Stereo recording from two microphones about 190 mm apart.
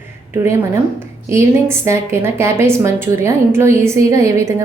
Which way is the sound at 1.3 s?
15° right (ahead or behind).